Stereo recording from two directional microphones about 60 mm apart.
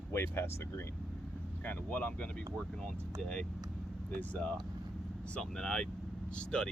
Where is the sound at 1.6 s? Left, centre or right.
Left.